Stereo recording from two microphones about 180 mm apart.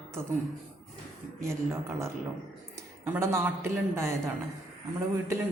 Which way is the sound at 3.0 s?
15° right (ahead or behind).